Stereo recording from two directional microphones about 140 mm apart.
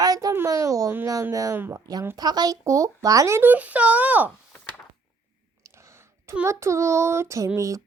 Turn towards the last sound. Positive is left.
turn(degrees=-20)  # may be behind; listen again after turning